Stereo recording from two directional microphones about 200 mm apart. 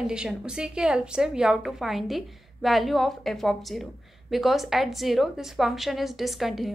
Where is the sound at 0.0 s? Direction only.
5° right (ahead or behind).